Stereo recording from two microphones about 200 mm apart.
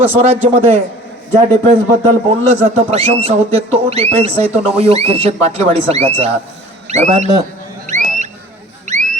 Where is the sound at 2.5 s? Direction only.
30° right (ahead or behind).